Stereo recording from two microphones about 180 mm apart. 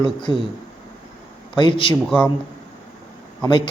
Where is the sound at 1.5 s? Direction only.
25° left (ahead or behind).